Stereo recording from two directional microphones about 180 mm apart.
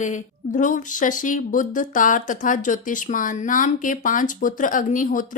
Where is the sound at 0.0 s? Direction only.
45° left (ahead or behind).